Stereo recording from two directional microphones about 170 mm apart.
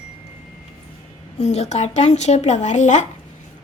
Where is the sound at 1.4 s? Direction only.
40° left (ahead or behind).